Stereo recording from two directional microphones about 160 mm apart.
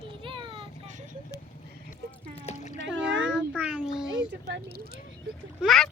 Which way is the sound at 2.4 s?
45° left (ahead or behind).